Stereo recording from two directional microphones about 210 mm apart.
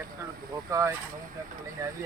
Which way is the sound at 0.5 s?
15° right (ahead or behind).